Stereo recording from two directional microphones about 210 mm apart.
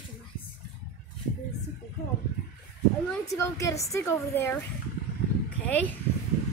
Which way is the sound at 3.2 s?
15° left (ahead or behind).